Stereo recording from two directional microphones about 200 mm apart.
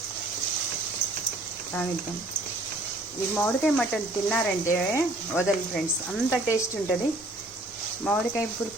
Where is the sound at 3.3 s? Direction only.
5° left (ahead or behind).